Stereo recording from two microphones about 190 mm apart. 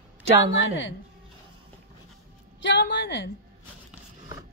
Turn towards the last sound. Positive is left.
turn(degrees=65)  # may be behind; listen again after turning